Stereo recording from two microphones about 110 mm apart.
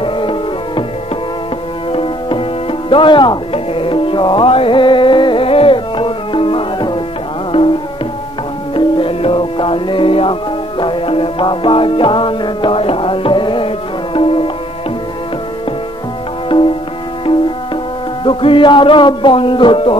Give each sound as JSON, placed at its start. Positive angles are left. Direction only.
{"t": 0.0, "sound": "music", "side_deg": 50}
{"t": 1.9, "sound": "music", "side_deg": 55}
{"t": 2.9, "sound": "tabla", "side_deg": 50}
{"t": 7.5, "sound": "music", "side_deg": 60}
{"t": 8.7, "sound": "music", "side_deg": 55}
{"t": 16.4, "sound": "music", "side_deg": 50}
{"t": 18.2, "sound": "music", "side_deg": 50}